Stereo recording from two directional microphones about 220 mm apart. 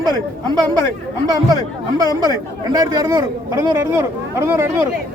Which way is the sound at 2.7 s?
15° right (ahead or behind).